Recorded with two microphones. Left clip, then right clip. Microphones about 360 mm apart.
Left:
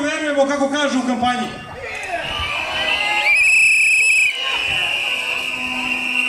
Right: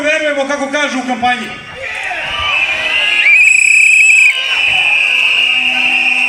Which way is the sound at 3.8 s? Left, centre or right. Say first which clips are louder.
Right 7 dB; left.